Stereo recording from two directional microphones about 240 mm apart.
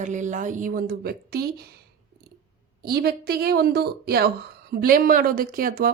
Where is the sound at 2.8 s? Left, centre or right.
Right.